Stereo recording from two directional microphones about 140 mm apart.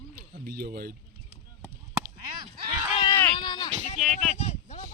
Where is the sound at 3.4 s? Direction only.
30° left (ahead or behind).